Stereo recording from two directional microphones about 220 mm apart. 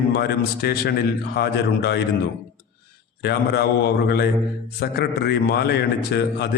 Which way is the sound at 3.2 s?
50° left (ahead or behind).